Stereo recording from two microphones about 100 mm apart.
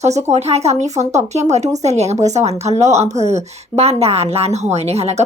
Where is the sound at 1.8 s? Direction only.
90° right.